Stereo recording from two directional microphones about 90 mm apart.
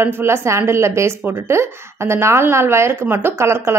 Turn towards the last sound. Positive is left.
turn(degrees=-30)  # may be behind; listen again after turning